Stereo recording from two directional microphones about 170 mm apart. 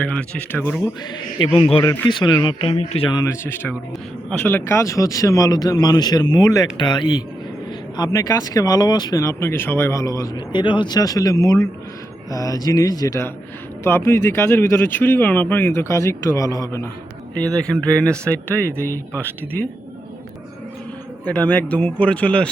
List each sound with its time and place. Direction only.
0.0 s speech: 10° left (ahead or behind)
1.4 s a man's voice: 30° left (ahead or behind)
17.7 s speech: 5° left (ahead or behind)
21.2 s speech: 10° left (ahead or behind)